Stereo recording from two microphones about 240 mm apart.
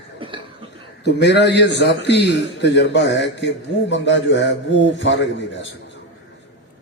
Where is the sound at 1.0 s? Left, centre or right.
Left.